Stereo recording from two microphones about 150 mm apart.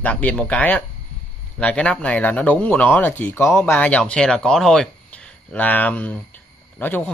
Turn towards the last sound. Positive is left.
turn(degrees=15)  # may be behind; listen again after turning